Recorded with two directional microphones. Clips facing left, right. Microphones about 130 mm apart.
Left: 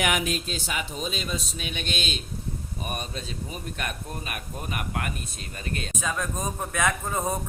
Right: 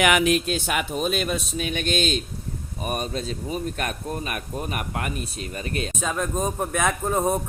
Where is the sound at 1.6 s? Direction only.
45° right (ahead or behind).